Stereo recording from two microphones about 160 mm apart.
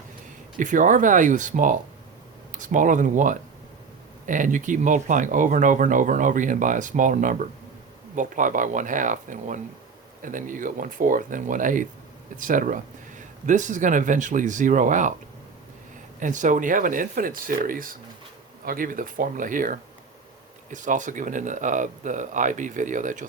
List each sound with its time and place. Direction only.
0.5 s speech: 55° right (ahead or behind)
16.2 s speech: 55° right (ahead or behind)